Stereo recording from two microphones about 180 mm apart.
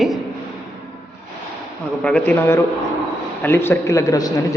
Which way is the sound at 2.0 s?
10° left (ahead or behind).